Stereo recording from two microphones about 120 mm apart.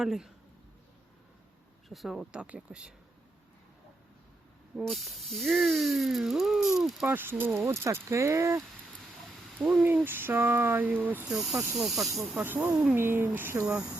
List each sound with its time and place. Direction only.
0.0 s speech: 5° right (ahead or behind)
1.9 s speech: centre (ahead or behind)
4.8 s speech: centre (ahead or behind)
7.1 s speech: 15° right (ahead or behind)
9.8 s speech: 15° right (ahead or behind)
11.3 s speech: 5° right (ahead or behind)
12.4 s speech: 15° right (ahead or behind)